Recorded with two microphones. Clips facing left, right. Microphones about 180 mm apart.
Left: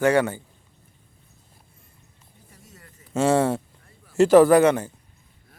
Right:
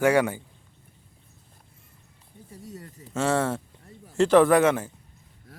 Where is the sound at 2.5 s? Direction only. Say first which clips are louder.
Right 10 dB; 35° right (ahead or behind).